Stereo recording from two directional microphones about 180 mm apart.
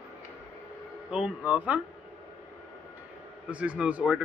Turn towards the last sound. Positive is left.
turn(degrees=-5)  # may be behind; listen again after turning